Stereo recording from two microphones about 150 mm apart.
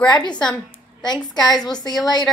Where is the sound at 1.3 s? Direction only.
25° left (ahead or behind).